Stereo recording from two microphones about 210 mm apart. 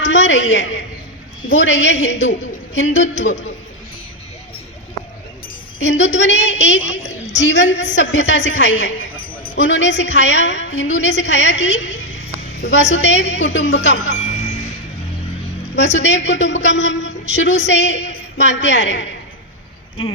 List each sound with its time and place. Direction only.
0.0 s a woman's voice: 60° left (ahead or behind)
5.8 s a woman's voice: 60° left (ahead or behind)
15.7 s a woman's voice: 60° left (ahead or behind)